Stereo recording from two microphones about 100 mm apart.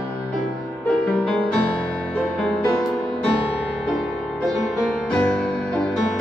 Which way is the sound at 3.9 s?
Centre (ahead or behind).